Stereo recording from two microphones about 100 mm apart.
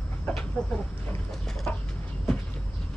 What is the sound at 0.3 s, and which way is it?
Chicken, 10° left (ahead or behind).